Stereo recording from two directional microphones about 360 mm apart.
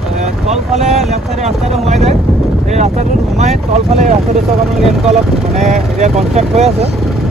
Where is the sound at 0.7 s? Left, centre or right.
Centre.